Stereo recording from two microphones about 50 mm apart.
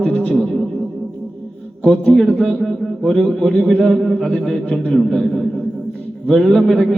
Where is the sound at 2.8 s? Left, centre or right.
Centre.